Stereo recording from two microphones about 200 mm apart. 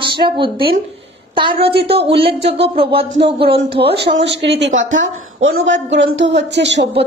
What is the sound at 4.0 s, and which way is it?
A woman's voice, 60° right (ahead or behind).